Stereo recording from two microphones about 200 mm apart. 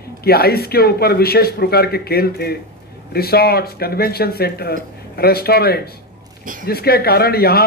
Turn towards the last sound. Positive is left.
turn(degrees=50)  # may be behind; listen again after turning